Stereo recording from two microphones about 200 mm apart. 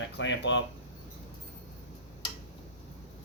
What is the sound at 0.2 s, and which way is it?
Speech, 65° left (ahead or behind).